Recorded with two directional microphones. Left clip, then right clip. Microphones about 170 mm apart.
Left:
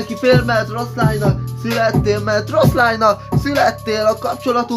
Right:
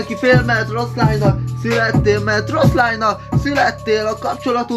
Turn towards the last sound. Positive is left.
turn(degrees=20)  # may be behind; listen again after turning